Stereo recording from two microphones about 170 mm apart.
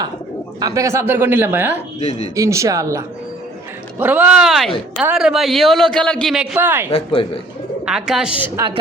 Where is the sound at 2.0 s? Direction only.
40° left (ahead or behind).